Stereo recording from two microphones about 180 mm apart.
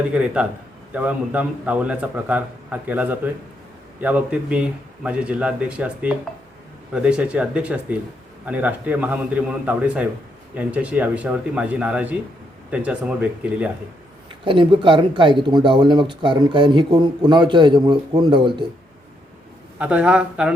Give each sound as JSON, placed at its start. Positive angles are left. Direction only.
{"t": 0.1, "sound": "a man's voice", "side_deg": -5}
{"t": 14.4, "sound": "speech", "side_deg": -30}
{"t": 19.8, "sound": "a man's voice", "side_deg": -5}